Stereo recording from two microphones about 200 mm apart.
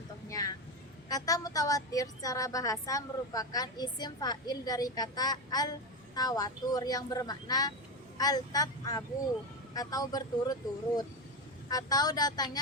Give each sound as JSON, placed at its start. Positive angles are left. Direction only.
{"t": 0.3, "sound": "vehicle", "side_deg": 15}
{"t": 1.0, "sound": "a woman's voice", "side_deg": 20}